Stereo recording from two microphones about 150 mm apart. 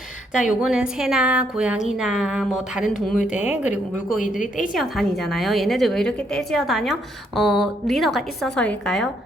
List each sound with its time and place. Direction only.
0.3 s a woman's voice: 5° right (ahead or behind)
4.4 s a woman's voice: 60° left (ahead or behind)
4.7 s a woman's voice: centre (ahead or behind)